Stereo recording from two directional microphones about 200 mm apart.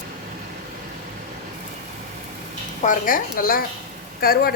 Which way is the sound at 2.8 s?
45° left (ahead or behind).